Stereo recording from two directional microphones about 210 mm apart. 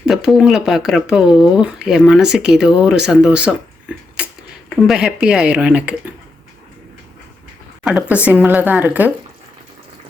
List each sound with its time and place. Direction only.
0.0 s speech: centre (ahead or behind)
4.2 s a sound: 5° right (ahead or behind)
4.9 s speech: 5° right (ahead or behind)
7.9 s speech: 5° right (ahead or behind)